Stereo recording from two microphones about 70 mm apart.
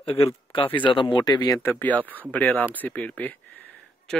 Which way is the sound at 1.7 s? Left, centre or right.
Left.